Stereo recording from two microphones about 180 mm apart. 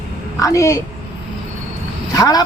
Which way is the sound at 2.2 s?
20° left (ahead or behind).